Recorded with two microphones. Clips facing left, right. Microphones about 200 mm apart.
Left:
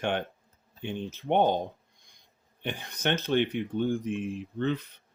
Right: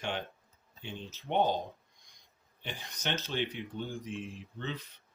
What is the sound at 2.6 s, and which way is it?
Speech, 55° left (ahead or behind).